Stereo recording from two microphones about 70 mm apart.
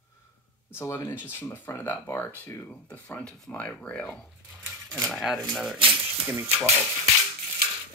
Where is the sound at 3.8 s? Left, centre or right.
Centre.